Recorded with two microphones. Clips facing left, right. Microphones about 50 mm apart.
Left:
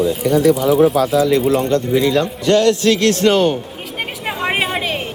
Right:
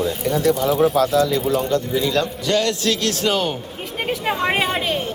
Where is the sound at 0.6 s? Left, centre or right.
Centre.